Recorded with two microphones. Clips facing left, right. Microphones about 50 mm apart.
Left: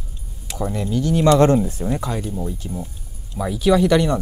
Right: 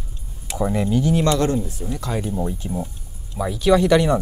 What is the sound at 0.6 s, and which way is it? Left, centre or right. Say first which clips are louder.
Speech: right 2 dB; centre.